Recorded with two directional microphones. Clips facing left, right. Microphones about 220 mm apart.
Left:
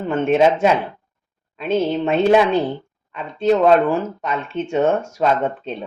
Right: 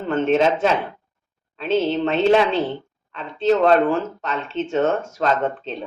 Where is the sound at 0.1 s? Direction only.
10° left (ahead or behind).